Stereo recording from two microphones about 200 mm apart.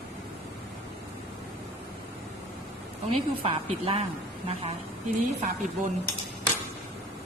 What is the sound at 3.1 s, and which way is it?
Speech, 30° right (ahead or behind).